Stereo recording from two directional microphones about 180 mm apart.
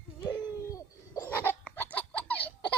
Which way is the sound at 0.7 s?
15° left (ahead or behind).